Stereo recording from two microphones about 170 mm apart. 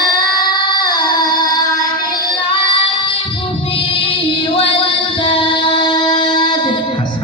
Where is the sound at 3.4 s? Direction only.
30° left (ahead or behind).